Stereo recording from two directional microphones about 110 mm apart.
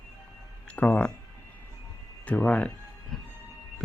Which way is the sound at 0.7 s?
15° left (ahead or behind).